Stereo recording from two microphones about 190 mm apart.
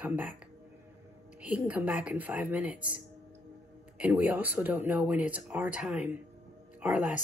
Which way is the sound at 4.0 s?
10° right (ahead or behind).